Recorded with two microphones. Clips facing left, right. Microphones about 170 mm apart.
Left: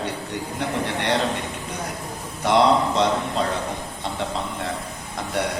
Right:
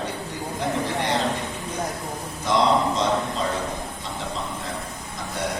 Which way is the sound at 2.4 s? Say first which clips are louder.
Left 3 dB; 65° left (ahead or behind).